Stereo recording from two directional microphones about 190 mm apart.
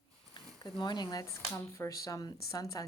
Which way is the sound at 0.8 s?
25° left (ahead or behind).